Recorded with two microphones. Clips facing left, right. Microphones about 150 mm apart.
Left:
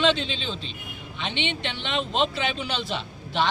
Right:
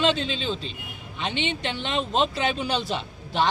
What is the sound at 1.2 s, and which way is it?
Speech, 40° right (ahead or behind).